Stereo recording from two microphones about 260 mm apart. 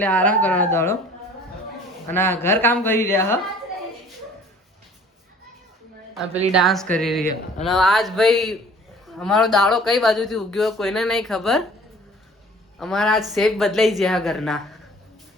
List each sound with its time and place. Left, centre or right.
0.0 s speech: centre
2.0 s speech: centre
6.5 s speech: centre
12.8 s speech: centre